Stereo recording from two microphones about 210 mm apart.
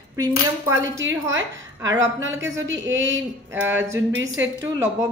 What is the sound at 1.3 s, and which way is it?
A woman's voice, 65° right (ahead or behind).